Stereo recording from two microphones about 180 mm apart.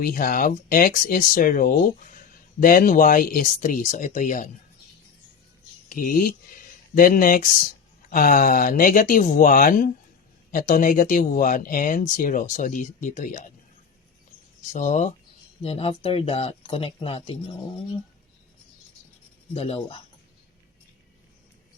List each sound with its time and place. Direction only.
0.0 s speech: 50° left (ahead or behind)
5.9 s speech: 50° left (ahead or behind)
14.7 s speech: 40° left (ahead or behind)
19.5 s speech: 35° left (ahead or behind)